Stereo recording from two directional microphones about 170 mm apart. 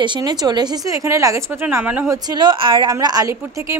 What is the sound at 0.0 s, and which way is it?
A woman's voice, 25° right (ahead or behind).